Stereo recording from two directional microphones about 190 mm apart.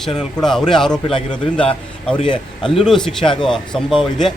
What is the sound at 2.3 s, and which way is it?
Speech, 25° left (ahead or behind).